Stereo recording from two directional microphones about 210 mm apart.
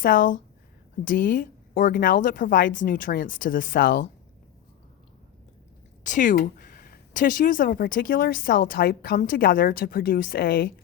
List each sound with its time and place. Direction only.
0.0 s speech: 40° left (ahead or behind)
6.0 s speech: 35° left (ahead or behind)